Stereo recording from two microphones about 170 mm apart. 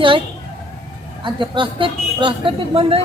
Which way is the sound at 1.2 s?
30° right (ahead or behind).